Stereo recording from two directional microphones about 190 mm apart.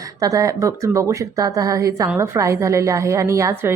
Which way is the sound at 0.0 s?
15° right (ahead or behind).